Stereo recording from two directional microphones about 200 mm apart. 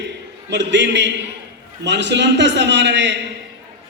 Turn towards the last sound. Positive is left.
turn(degrees=-60)  # may be behind; listen again after turning